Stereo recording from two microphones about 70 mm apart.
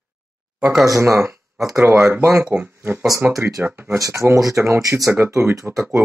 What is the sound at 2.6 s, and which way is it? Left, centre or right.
Speech, right.